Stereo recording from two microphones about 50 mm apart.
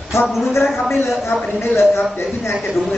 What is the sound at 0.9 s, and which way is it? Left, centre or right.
Speech, left.